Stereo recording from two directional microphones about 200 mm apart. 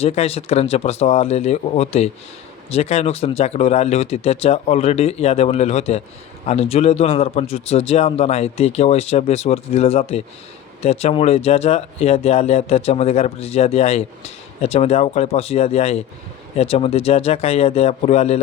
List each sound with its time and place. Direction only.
0.0 s speech: 30° left (ahead or behind)